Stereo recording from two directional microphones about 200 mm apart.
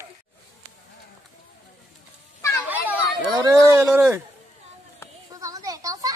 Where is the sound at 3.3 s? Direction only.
20° right (ahead or behind).